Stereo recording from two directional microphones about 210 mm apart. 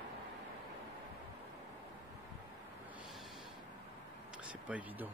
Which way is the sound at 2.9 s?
Centre (ahead or behind).